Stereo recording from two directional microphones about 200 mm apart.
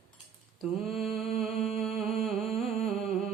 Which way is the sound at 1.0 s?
Centre (ahead or behind).